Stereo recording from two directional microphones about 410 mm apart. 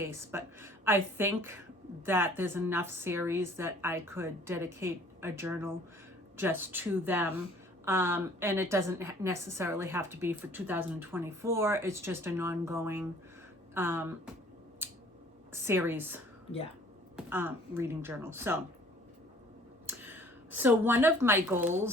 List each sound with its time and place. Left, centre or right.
0.0 s a woman's voice: centre
15.5 s a woman's voice: centre
19.9 s speech: centre